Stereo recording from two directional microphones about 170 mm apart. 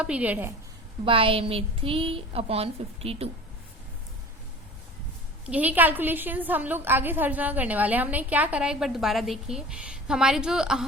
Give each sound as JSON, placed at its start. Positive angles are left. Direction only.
{"t": 0.0, "sound": "a woman's voice", "side_deg": -10}
{"t": 1.0, "sound": "a woman's voice", "side_deg": -30}
{"t": 5.5, "sound": "a woman's voice", "side_deg": -10}